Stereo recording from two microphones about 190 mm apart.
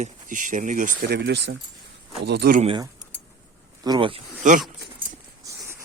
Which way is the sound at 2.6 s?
30° right (ahead or behind).